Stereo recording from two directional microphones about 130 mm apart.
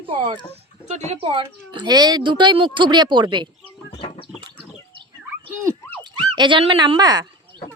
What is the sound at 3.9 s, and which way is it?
Livestock, 45° left (ahead or behind).